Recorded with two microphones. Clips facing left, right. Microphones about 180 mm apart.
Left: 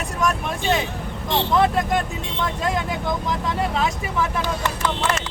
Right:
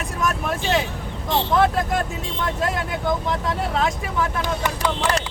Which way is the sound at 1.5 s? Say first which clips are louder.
Left 1 dB; centre (ahead or behind).